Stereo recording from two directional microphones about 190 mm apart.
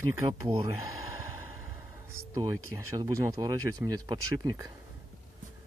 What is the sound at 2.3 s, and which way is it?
Speech, 20° right (ahead or behind).